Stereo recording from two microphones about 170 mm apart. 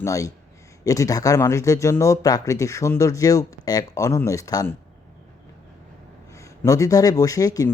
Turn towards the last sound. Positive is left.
turn(degrees=20)  # may be behind; listen again after turning